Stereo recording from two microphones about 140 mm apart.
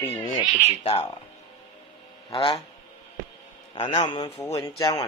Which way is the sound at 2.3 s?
40° left (ahead or behind).